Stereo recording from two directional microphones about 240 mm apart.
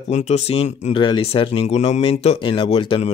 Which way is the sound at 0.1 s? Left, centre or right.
Left.